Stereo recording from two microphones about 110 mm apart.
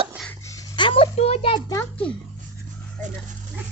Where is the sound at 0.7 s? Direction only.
55° left (ahead or behind).